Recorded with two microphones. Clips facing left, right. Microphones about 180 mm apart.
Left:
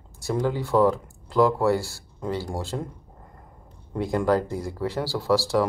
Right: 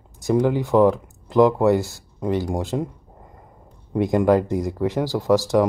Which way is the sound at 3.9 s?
20° right (ahead or behind).